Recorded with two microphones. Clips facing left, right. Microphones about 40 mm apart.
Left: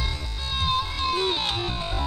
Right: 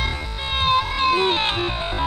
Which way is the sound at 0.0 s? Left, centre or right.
Right.